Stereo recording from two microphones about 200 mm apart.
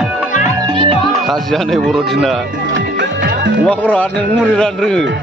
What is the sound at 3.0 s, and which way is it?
Music, 60° right (ahead or behind).